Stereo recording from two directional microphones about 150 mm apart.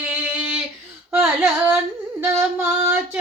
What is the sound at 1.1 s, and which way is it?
Carnatic music, 10° right (ahead or behind).